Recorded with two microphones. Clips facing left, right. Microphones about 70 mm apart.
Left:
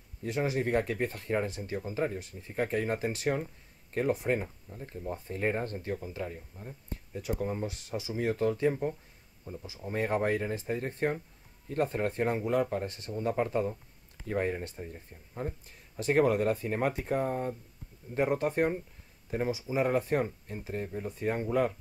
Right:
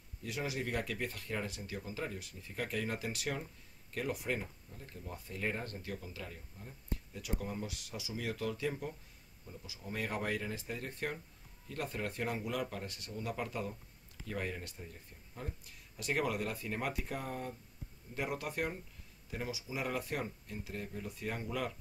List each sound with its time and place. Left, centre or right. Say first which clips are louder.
0.2 s speech: left 8 dB; left